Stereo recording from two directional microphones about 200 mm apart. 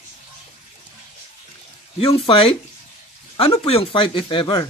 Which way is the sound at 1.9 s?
30° left (ahead or behind).